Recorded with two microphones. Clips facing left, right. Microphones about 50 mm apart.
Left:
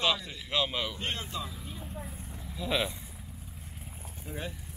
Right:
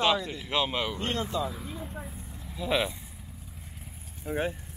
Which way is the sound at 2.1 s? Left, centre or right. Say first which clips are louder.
Even; centre.